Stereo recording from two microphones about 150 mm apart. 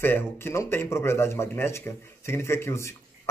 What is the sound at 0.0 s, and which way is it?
Speech, 15° left (ahead or behind).